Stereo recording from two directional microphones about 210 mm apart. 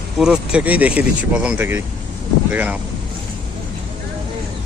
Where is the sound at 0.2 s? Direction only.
5° right (ahead or behind).